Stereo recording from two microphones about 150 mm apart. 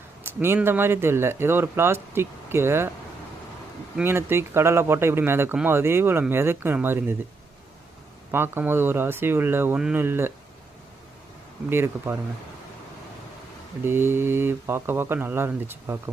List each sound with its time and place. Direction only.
0.2 s speech: 15° right (ahead or behind)
3.9 s speech: 15° right (ahead or behind)
8.3 s speech: 15° right (ahead or behind)
11.7 s speech: 15° right (ahead or behind)
13.8 s speech: 15° right (ahead or behind)